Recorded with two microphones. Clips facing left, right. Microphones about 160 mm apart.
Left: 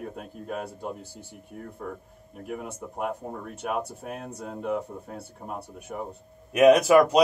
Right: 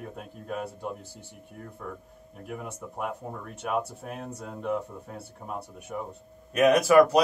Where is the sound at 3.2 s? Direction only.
5° right (ahead or behind).